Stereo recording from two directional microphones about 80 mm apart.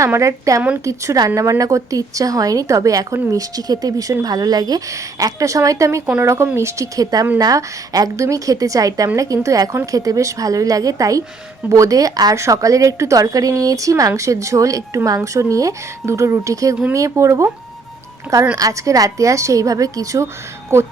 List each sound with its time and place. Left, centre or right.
0.0 s speech: right
18.5 s speech: right